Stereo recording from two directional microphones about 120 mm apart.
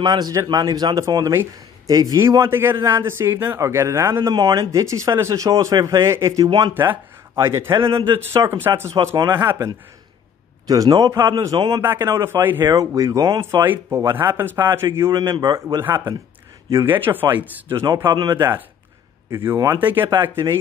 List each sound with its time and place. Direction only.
0.0 s speech: 35° right (ahead or behind)
4.3 s speech: 35° right (ahead or behind)
9.1 s speech: 35° right (ahead or behind)
11.8 s speech: 20° right (ahead or behind)
12.6 s speech: 30° right (ahead or behind)
18.1 s speech: 40° right (ahead or behind)
19.3 s speech: 20° right (ahead or behind)